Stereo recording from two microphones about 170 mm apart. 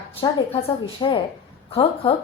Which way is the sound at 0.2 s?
30° left (ahead or behind).